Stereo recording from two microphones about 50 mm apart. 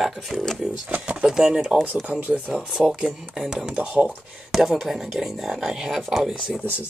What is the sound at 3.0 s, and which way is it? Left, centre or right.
Speech, centre.